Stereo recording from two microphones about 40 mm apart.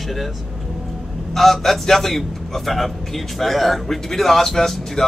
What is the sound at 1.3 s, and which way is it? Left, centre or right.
A man's voice, centre.